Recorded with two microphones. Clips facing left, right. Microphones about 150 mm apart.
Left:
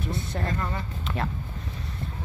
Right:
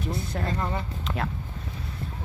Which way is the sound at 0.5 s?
20° right (ahead or behind).